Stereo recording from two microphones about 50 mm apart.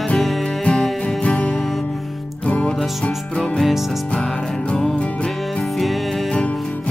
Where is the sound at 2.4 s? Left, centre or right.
Left.